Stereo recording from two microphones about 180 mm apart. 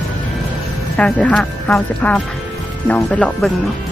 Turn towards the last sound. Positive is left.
turn(degrees=5)  # may be behind; listen again after turning